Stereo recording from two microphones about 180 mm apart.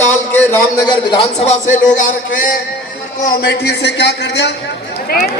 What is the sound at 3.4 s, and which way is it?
A man's voice, 65° left (ahead or behind).